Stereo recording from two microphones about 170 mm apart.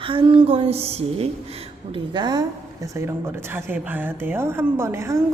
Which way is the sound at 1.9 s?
25° right (ahead or behind).